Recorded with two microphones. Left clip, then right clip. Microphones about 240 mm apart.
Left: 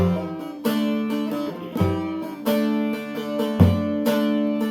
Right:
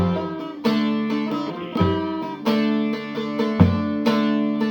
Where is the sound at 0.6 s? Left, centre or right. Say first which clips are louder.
Right 2 dB; right.